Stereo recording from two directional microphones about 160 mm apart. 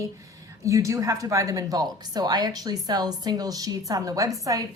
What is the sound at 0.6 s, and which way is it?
A woman's voice, 20° right (ahead or behind).